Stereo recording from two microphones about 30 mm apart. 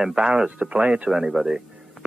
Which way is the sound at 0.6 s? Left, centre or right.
Right.